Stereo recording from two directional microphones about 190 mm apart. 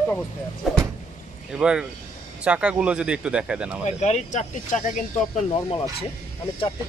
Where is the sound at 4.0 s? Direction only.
35° left (ahead or behind).